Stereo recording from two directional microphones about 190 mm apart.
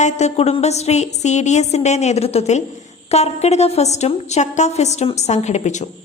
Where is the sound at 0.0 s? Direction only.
35° left (ahead or behind).